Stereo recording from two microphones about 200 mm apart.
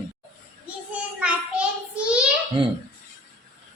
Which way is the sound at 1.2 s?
5° right (ahead or behind).